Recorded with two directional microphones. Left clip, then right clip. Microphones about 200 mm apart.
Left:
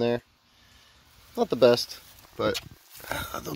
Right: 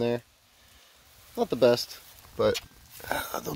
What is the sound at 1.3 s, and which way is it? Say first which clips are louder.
Speech: left 2 dB; centre (ahead or behind).